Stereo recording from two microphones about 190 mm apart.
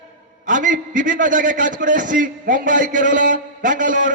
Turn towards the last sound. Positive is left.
turn(degrees=-45)  # may be behind; listen again after turning